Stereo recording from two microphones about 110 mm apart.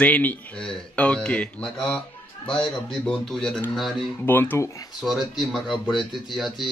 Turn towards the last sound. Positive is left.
turn(degrees=0)  # may be behind; listen again after turning